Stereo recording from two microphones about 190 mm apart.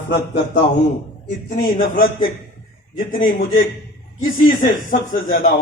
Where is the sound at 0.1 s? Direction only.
65° left (ahead or behind).